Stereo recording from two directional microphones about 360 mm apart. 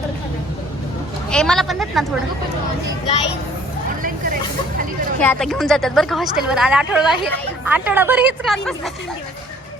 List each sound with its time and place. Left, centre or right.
1.3 s a woman's voice: centre
4.0 s hubbub: right
5.2 s a woman's voice: centre